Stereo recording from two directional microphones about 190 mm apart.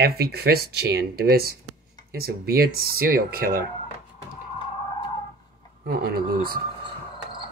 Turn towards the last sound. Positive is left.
turn(degrees=-50)  # may be behind; listen again after turning